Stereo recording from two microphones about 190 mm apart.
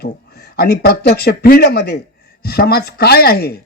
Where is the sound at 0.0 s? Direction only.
60° left (ahead or behind).